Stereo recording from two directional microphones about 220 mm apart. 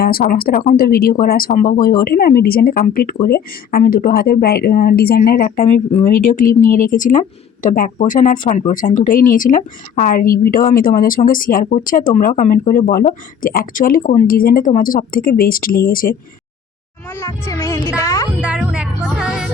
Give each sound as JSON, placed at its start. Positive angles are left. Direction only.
{"t": 0.0, "sound": "speech", "side_deg": 45}
{"t": 17.1, "sound": "music", "side_deg": 10}
{"t": 18.3, "sound": "music", "side_deg": -5}